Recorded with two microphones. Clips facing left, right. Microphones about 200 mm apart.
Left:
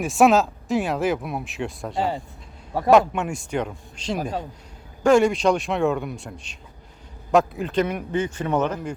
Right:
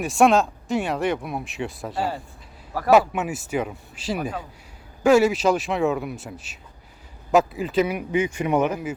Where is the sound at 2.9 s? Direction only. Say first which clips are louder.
Left 1 dB; 5° right (ahead or behind).